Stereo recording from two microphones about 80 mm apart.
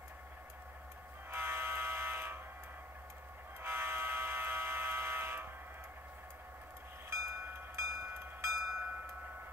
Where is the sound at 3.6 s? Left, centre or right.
Right.